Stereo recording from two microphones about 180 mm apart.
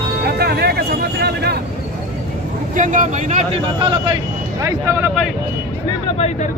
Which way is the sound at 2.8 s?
45° right (ahead or behind).